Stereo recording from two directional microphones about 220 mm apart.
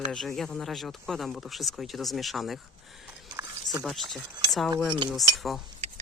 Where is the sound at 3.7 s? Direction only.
Centre (ahead or behind).